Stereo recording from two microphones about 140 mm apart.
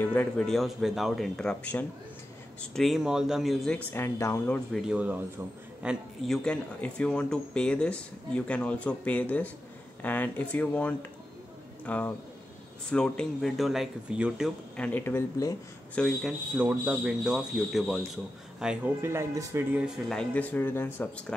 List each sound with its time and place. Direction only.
0.0 s speech: 10° left (ahead or behind)
3.9 s speech: 20° left (ahead or behind)
4.7 s a man's voice: 5° right (ahead or behind)
14.8 s speech: 10° left (ahead or behind)
16.2 s speech: 5° right (ahead or behind)
18.9 s speech: 20° right (ahead or behind)
19.8 s speech: 5° left (ahead or behind)